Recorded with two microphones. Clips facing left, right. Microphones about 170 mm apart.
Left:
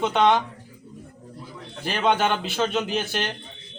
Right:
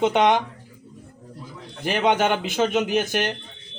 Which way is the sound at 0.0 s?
15° right (ahead or behind).